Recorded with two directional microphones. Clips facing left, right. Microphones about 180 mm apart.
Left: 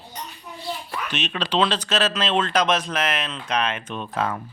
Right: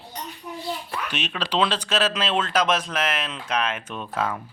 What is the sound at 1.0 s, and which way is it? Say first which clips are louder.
Speech: left 3 dB; 10° right (ahead or behind).